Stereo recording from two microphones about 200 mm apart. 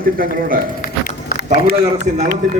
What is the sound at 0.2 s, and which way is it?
A man's voice, 45° right (ahead or behind).